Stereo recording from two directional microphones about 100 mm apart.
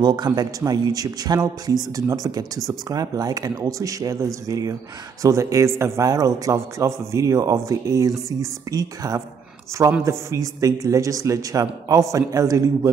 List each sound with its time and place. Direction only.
0.0 s a man's voice: 45° right (ahead or behind)